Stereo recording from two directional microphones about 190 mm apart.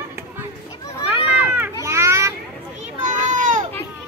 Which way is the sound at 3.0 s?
40° right (ahead or behind).